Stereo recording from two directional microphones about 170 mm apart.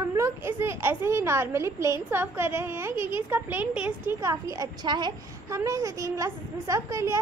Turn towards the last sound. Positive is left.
turn(degrees=-15)  # may be behind; listen again after turning